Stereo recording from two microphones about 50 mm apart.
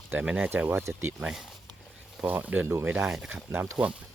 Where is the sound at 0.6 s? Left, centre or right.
Right.